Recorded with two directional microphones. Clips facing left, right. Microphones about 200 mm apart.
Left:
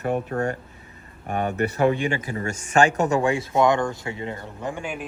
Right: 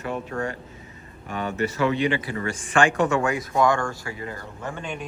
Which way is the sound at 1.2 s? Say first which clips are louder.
Left 2 dB; 55° left (ahead or behind).